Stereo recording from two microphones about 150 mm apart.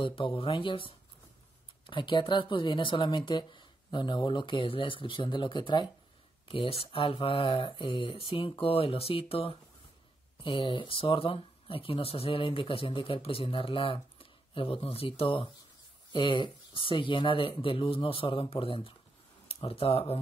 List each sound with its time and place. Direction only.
0.0 s speech: 35° left (ahead or behind)